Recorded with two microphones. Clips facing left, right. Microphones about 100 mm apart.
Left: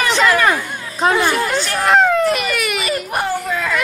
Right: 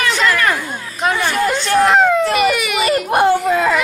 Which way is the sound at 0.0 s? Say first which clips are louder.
Left 2 dB; 20° left (ahead or behind).